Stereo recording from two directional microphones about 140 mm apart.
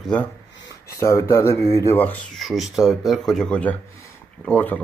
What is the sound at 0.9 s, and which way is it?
Speech, 20° left (ahead or behind).